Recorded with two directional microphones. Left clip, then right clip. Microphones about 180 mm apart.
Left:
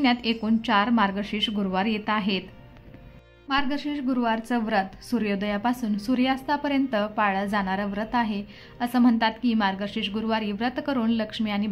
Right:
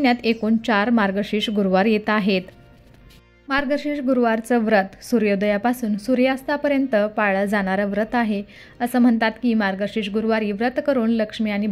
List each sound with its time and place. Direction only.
0.0 s a woman's voice: 25° right (ahead or behind)
3.4 s a woman's voice: 30° right (ahead or behind)